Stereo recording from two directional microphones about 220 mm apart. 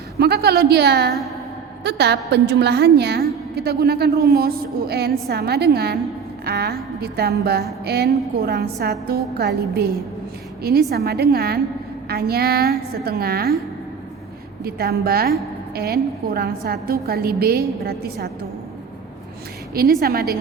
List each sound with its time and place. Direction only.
0.2 s a woman's voice: 45° right (ahead or behind)
14.6 s a woman's voice: 45° right (ahead or behind)
19.7 s a woman's voice: 45° right (ahead or behind)